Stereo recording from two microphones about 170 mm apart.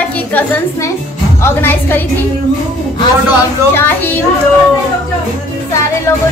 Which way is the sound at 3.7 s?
10° left (ahead or behind).